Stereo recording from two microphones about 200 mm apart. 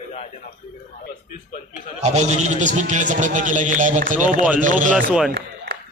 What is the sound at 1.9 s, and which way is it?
A man's voice, 35° right (ahead or behind).